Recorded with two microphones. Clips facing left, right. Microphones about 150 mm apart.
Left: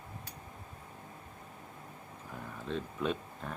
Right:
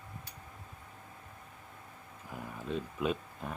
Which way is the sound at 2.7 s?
10° right (ahead or behind).